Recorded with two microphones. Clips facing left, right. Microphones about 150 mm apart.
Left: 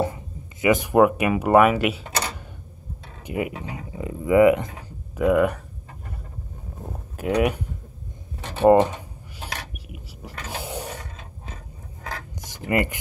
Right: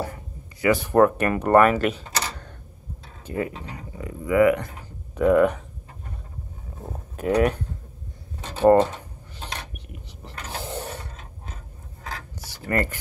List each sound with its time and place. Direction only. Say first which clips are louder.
0.0 s speech: left 6 dB; 20° left (ahead or behind)
5.1 s speech: right 1 dB; 5° left (ahead or behind)
6.8 s speech: right 1 dB; centre (ahead or behind)
8.6 s a sound: left 1 dB; 15° left (ahead or behind)